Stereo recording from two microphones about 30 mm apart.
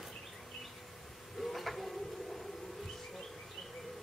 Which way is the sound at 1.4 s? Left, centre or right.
Centre.